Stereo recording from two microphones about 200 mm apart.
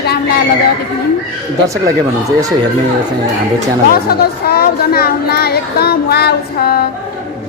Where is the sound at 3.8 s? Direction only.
50° left (ahead or behind).